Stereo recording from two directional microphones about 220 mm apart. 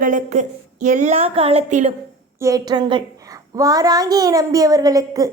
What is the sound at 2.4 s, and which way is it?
A child's voice, 15° right (ahead or behind).